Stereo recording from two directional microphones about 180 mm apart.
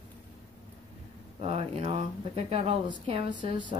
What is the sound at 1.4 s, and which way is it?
A woman's voice, 35° right (ahead or behind).